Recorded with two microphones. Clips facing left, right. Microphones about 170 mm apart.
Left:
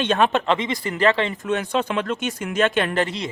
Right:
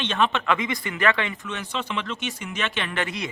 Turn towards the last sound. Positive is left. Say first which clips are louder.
# left 3 dB
turn(degrees=25)  # may be behind; listen again after turning